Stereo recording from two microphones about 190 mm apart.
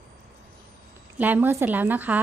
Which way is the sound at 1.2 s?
10° right (ahead or behind).